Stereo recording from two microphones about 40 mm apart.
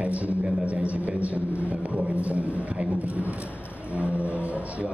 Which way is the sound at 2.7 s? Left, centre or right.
Right.